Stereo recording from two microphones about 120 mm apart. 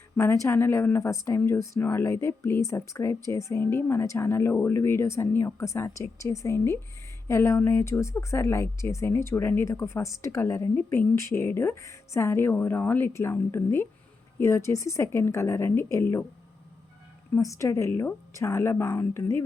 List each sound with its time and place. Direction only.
0.4 s speech: 20° left (ahead or behind)
17.3 s speech: 25° left (ahead or behind)